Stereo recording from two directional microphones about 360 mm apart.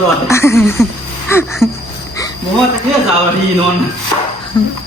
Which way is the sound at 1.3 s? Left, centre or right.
Centre.